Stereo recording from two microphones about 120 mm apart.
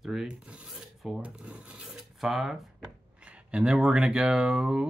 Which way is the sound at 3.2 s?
10° right (ahead or behind).